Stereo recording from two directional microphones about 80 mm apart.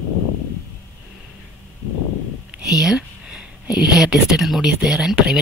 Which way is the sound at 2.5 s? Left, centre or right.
Centre.